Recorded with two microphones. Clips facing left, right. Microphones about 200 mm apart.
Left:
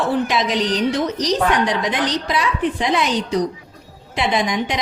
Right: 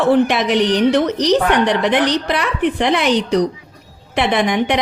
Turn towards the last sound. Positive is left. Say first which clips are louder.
# right 4 dB
turn(degrees=-65)  # may be behind; listen again after turning